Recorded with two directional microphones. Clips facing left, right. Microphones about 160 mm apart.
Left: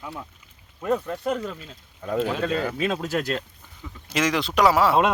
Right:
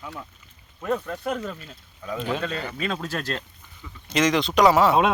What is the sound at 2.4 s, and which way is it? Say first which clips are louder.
Speech: left 5 dB; 45° left (ahead or behind).